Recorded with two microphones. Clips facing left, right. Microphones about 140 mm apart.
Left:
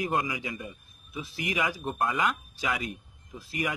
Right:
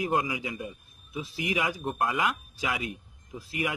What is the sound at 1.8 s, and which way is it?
Speech, centre (ahead or behind).